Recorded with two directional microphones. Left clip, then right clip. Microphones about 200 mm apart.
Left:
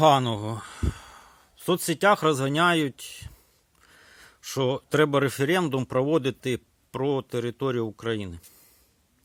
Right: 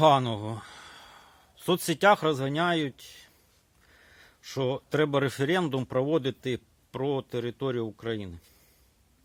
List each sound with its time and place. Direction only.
0.0 s speech: 15° left (ahead or behind)